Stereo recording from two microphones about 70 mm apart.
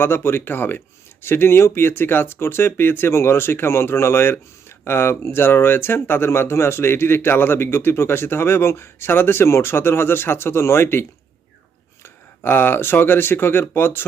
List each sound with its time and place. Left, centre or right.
0.0 s speech: left
12.0 s speech: left